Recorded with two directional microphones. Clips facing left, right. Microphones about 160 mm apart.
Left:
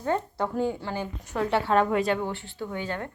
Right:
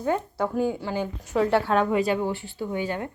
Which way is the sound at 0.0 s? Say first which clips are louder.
Right 2 dB; 10° right (ahead or behind).